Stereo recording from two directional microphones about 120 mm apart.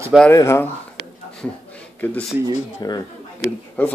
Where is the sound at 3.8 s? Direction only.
15° left (ahead or behind).